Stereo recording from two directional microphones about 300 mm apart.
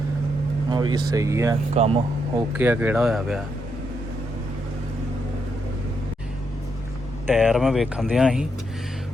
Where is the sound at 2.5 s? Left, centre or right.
Centre.